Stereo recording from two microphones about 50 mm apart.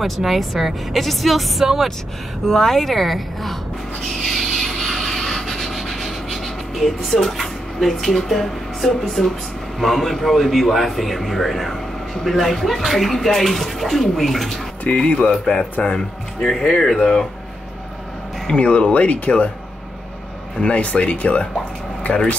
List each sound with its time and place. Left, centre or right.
0.0 s a man's voice: centre
4.2 s sanding: centre
7.3 s a man's voice: centre
14.8 s speech: left
15.2 s speech: centre
18.5 s speech: left
20.7 s speech: left